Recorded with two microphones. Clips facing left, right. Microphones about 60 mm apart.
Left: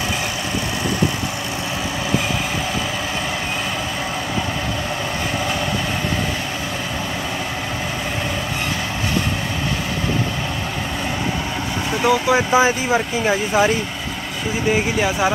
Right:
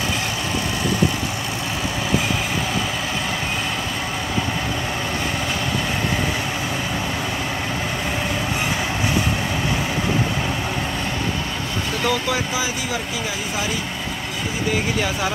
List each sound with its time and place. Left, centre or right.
12.0 s speech: centre
12.5 s speech: left
14.7 s speech: centre